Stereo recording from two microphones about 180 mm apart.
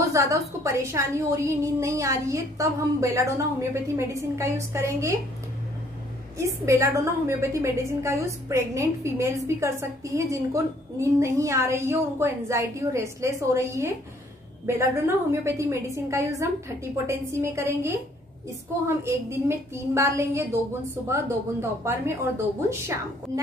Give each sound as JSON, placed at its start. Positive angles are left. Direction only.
{"t": 0.0, "sound": "a woman's voice", "side_deg": -15}
{"t": 6.3, "sound": "a woman's voice", "side_deg": -15}